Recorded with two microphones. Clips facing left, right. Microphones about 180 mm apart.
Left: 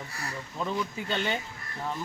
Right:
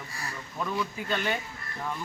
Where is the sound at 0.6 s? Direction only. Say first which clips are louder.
Even; 25° left (ahead or behind).